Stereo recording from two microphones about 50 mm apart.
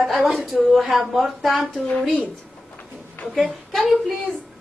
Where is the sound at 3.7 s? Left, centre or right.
Centre.